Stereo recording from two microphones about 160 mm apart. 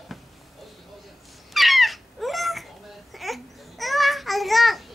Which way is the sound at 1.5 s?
Centre (ahead or behind).